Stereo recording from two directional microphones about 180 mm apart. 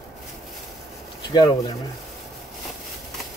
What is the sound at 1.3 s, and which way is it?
Speech, 20° left (ahead or behind).